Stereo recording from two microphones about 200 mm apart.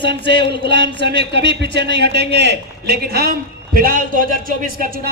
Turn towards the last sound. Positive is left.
turn(degrees=-45)  # may be behind; listen again after turning